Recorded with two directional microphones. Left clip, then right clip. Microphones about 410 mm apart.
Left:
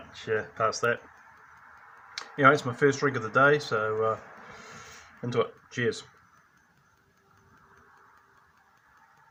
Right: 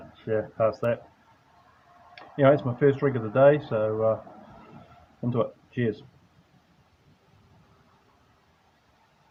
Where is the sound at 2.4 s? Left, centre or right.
Right.